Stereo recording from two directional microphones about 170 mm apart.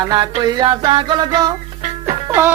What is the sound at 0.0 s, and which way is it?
Music, 25° right (ahead or behind).